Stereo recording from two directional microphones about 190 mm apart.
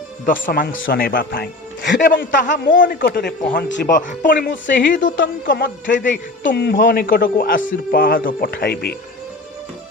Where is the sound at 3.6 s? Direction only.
70° left (ahead or behind).